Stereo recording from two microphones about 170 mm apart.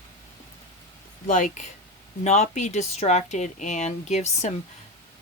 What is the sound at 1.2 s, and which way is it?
Speech, 50° left (ahead or behind).